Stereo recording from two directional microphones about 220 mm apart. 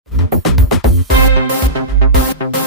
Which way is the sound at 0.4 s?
Centre (ahead or behind).